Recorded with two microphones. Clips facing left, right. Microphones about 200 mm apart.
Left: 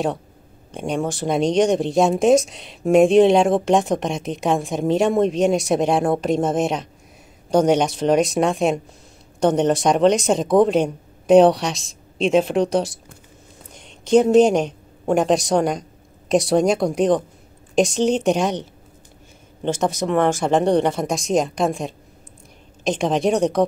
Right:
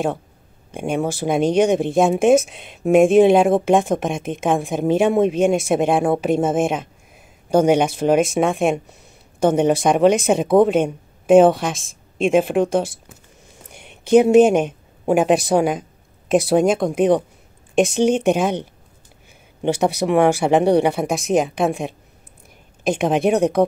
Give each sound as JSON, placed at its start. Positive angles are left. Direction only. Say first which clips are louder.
{"t": 0.7, "sound": "speech", "louder": "right 2 dB", "side_deg": -5}
{"t": 11.7, "sound": "speech", "louder": "even", "side_deg": -50}
{"t": 12.3, "sound": "a woman's voice", "louder": "right 1 dB", "side_deg": 0}
{"t": 19.6, "sound": "speech", "louder": "right 3 dB", "side_deg": -10}